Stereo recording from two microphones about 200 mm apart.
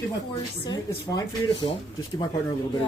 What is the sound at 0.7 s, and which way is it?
Speech, 20° left (ahead or behind).